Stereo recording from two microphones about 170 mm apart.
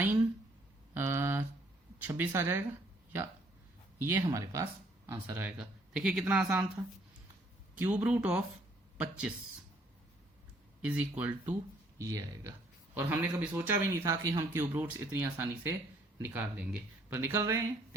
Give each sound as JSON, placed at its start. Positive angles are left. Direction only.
{"t": 0.9, "sound": "a sound", "side_deg": -15}
{"t": 2.0, "sound": "a man's voice", "side_deg": -10}
{"t": 4.0, "sound": "a man's voice", "side_deg": -15}
{"t": 7.8, "sound": "a man's voice", "side_deg": -10}
{"t": 10.8, "sound": "a man's voice", "side_deg": -10}